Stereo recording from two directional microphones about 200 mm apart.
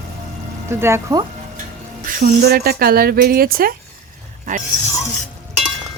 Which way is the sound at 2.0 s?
45° right (ahead or behind).